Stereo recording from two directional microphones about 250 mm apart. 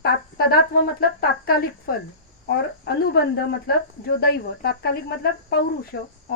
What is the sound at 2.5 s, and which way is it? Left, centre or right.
Speech, left.